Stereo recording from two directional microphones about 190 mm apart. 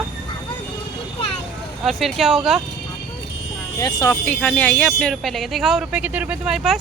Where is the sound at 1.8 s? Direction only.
Centre (ahead or behind).